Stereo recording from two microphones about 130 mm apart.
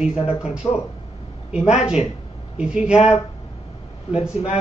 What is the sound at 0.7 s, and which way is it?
Speech, 20° left (ahead or behind).